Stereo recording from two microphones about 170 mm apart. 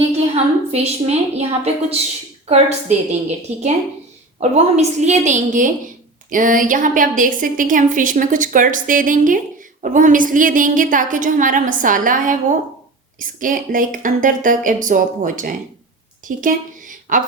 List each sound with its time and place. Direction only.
0.3 s a woman's voice: 35° right (ahead or behind)